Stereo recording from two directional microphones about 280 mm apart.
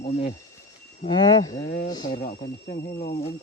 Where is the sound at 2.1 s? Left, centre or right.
Left.